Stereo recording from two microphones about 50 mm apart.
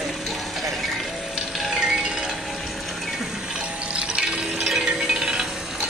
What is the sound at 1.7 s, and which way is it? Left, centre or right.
Music, centre.